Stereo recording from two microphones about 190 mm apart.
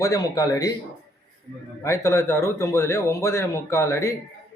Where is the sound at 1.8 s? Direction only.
15° left (ahead or behind).